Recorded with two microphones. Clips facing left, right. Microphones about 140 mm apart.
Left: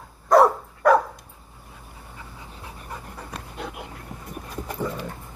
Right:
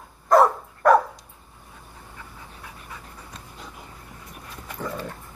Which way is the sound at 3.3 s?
70° left (ahead or behind).